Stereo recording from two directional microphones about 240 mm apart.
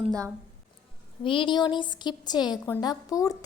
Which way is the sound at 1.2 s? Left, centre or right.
Left.